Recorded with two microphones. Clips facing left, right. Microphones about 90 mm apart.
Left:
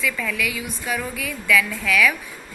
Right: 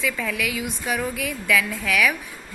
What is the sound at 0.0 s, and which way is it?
A woman's voice, 25° right (ahead or behind).